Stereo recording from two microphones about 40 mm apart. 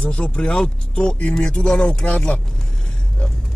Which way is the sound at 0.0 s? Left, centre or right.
Left.